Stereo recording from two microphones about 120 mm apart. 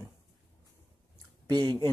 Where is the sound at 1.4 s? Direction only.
35° right (ahead or behind).